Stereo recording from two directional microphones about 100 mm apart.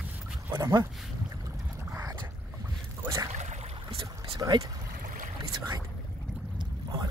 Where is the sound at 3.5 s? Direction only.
90° right.